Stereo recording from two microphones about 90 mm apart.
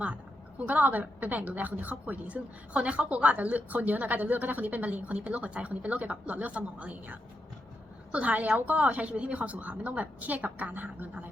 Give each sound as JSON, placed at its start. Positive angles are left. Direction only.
{"t": 0.6, "sound": "a woman's voice", "side_deg": -15}